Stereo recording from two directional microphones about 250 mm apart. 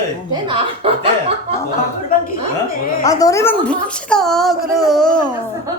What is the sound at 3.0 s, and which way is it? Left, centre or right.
A woman's voice, centre.